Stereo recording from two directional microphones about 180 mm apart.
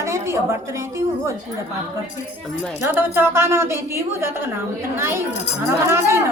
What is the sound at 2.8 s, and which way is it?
A woman's voice, 10° right (ahead or behind).